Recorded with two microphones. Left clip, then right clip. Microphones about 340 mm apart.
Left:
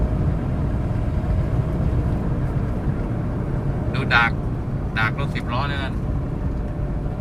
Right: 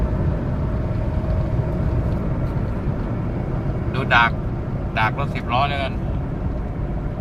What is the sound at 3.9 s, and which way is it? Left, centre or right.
Vehicle, centre.